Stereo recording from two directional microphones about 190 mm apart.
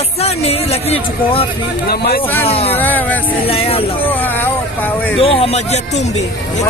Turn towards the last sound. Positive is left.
turn(degrees=35)  # may be behind; listen again after turning